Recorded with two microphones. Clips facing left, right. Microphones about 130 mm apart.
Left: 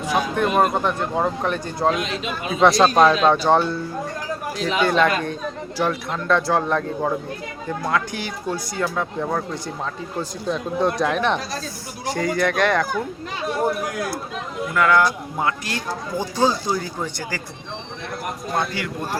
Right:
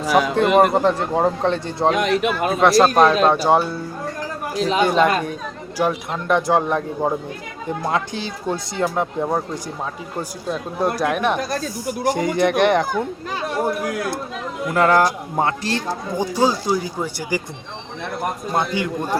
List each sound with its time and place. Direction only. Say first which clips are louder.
0.0 s speech: right 5 dB; 90° right
0.4 s speech: right 3 dB; 75° right (ahead or behind)
0.7 s speech: right 4 dB; 30° right (ahead or behind)
1.9 s speech: right 8 dB; 65° right (ahead or behind)
2.6 s speech: even; centre (ahead or behind)
4.5 s speech: right 5 dB; 35° right (ahead or behind)
4.8 s speech: right 1 dB; 15° right (ahead or behind)
10.2 s speech: left 1 dB; 5° right (ahead or behind)
12.1 s speech: right 1 dB; 20° right (ahead or behind)
14.7 s speech: right 2 dB; 35° right (ahead or behind)
16.1 s speech: right 1 dB; 10° right (ahead or behind)
18.5 s speech: right 2 dB; 20° right (ahead or behind)